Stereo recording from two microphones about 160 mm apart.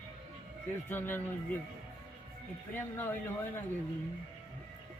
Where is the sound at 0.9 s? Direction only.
10° left (ahead or behind).